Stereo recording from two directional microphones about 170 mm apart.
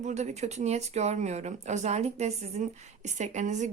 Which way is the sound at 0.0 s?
40° right (ahead or behind).